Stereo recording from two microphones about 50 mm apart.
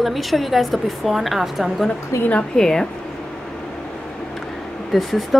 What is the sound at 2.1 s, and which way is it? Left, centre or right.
Speech, left.